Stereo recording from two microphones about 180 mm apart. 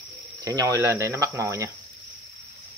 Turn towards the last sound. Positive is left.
turn(degrees=-15)  # may be behind; listen again after turning